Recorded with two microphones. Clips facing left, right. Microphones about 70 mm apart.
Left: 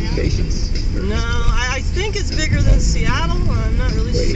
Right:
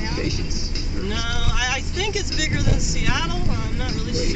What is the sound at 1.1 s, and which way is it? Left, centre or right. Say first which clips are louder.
Speech: left 4 dB; centre.